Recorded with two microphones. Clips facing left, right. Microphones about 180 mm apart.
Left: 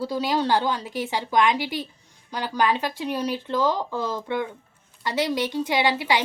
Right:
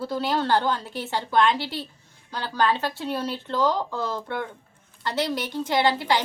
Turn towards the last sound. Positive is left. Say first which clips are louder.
# even
turn(degrees=15)  # may be behind; listen again after turning